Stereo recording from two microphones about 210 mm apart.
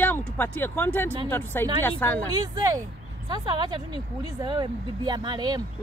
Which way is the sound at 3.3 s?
20° right (ahead or behind).